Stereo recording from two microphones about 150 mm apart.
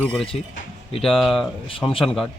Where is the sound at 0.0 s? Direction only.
5° left (ahead or behind).